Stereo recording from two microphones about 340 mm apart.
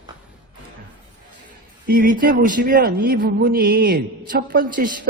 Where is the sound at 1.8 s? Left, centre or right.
Right.